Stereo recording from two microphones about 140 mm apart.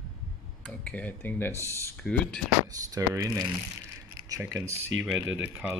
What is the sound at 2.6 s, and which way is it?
Speech, 25° right (ahead or behind).